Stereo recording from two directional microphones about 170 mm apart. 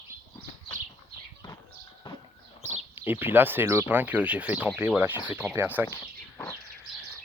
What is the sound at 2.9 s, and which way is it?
Speech, 10° right (ahead or behind).